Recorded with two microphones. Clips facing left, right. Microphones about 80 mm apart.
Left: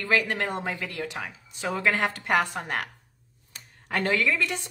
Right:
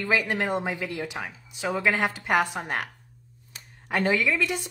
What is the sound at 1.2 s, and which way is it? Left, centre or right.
A woman's voice, centre.